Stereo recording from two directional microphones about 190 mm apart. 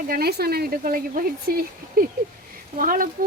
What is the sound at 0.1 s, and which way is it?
A woman's voice, 55° right (ahead or behind).